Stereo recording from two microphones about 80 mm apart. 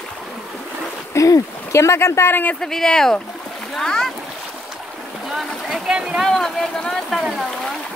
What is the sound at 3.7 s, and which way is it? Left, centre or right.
Splash, centre.